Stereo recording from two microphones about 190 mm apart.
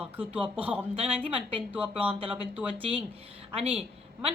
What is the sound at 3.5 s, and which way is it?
Speech, 30° right (ahead or behind).